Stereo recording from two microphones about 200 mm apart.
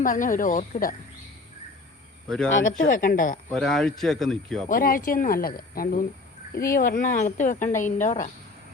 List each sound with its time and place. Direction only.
0.0 s speech: 40° left (ahead or behind)
2.2 s speech: 5° left (ahead or behind)
2.6 s speech: 40° left (ahead or behind)
3.5 s speech: 5° left (ahead or behind)
4.7 s speech: 45° left (ahead or behind)